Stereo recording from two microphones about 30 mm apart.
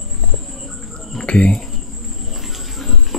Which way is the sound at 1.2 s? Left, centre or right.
Left.